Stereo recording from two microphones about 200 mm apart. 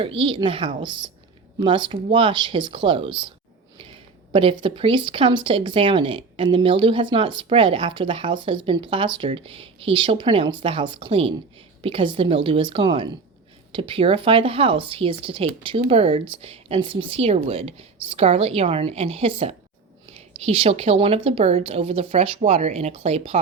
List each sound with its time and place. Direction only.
0.0 s speech: 25° right (ahead or behind)
4.3 s a woman's voice: 25° right (ahead or behind)